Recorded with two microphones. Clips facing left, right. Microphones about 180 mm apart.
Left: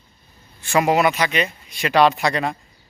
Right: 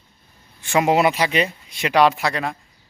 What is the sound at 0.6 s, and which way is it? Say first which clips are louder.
A man's voice: even; 15° right (ahead or behind).